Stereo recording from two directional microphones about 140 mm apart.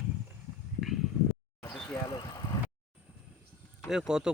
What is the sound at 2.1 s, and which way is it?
Vehicle, 30° left (ahead or behind).